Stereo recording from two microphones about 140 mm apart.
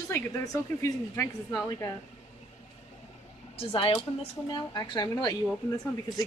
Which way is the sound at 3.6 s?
40° left (ahead or behind).